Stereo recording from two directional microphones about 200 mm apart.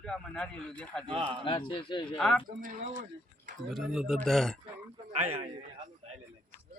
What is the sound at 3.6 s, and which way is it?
Speech, centre (ahead or behind).